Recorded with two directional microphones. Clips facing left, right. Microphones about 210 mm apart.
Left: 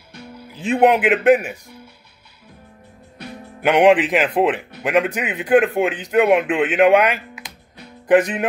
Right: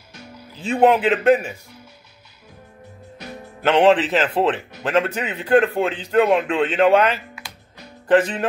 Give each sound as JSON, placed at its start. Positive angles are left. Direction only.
{"t": 0.6, "sound": "a man's voice", "side_deg": 15}
{"t": 3.6, "sound": "a man's voice", "side_deg": 15}